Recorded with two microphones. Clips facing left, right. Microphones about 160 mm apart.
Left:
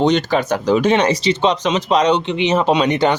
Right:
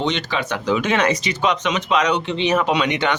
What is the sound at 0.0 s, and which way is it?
Speech, 45° left (ahead or behind).